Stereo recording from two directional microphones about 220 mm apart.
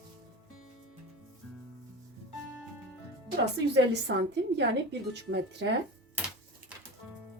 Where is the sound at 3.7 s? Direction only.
50° right (ahead or behind).